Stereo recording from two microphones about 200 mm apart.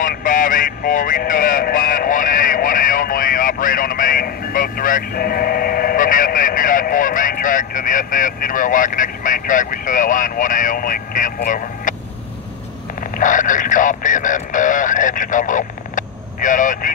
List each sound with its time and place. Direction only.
0.0 s speech: 40° left (ahead or behind)
13.2 s speech: 40° left (ahead or behind)